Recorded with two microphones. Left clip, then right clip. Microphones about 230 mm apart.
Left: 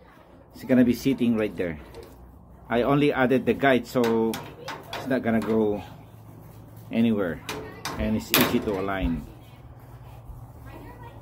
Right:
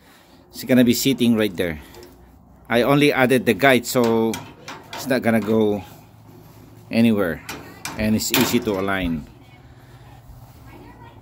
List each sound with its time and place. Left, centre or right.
0.6 s speech: right
6.9 s speech: right